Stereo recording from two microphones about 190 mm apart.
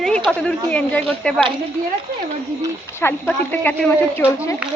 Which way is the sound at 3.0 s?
10° left (ahead or behind).